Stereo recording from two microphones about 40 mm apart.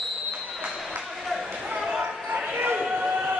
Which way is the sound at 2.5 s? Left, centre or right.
Right.